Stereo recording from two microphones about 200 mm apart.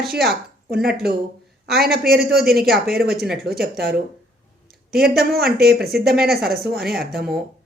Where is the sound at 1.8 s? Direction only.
50° right (ahead or behind).